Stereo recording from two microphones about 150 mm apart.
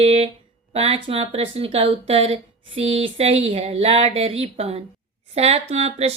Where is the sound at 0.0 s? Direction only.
40° right (ahead or behind).